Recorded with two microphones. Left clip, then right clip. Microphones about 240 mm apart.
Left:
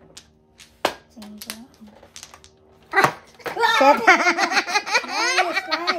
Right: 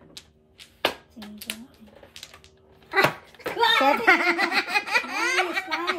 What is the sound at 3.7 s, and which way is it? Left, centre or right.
Giggle, left.